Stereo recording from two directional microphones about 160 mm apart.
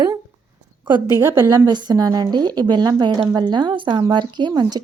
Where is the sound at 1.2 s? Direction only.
15° right (ahead or behind).